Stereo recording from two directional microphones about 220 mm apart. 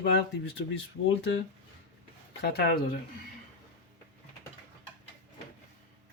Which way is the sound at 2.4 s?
45° left (ahead or behind).